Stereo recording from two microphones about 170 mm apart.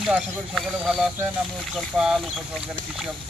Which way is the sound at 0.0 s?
Centre (ahead or behind).